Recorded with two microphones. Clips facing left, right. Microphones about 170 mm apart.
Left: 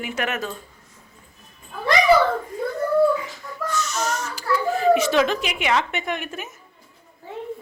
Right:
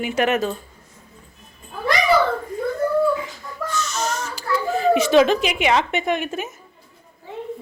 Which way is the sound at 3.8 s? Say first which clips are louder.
Right 1 dB; 25° right (ahead or behind).